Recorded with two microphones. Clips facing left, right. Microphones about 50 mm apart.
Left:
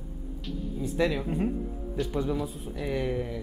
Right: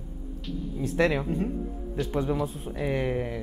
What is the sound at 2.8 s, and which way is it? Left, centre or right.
Speech, right.